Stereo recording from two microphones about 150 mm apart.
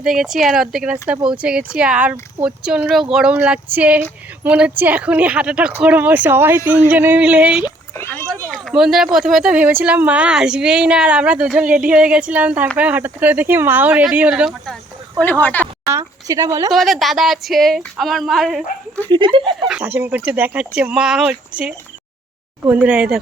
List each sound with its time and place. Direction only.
0.0 s speech: centre (ahead or behind)
7.9 s a sound: 15° left (ahead or behind)
8.4 s speech: centre (ahead or behind)
15.2 s speech: 15° left (ahead or behind)
15.6 s a woman's voice: 20° right (ahead or behind)
16.7 s speech: centre (ahead or behind)
19.1 s speech: 35° right (ahead or behind)
19.5 s speech: 5° right (ahead or behind)